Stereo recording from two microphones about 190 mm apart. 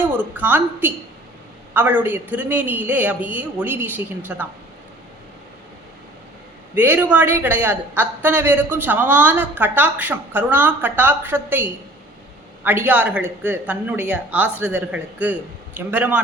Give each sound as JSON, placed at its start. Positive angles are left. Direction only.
{"t": 0.0, "sound": "a woman's voice", "side_deg": -10}
{"t": 6.7, "sound": "a woman's voice", "side_deg": -10}